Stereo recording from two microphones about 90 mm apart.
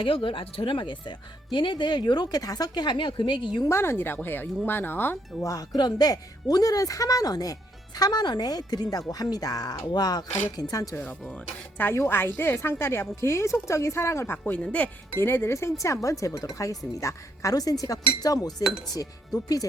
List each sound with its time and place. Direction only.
0.0 s speech: 75° left (ahead or behind); by 3.7 s 60° left (ahead or behind)
3.7 s speech: 30° left (ahead or behind)
5.4 s speech: 40° left (ahead or behind)
11.0 s speech: 15° left (ahead or behind)
15.2 s speech: 25° left (ahead or behind); by 18.5 s 45° left (ahead or behind)